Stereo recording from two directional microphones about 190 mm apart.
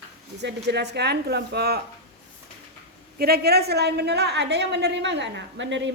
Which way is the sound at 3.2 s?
55° right (ahead or behind).